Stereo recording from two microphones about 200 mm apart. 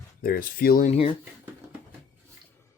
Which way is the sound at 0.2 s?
45° left (ahead or behind).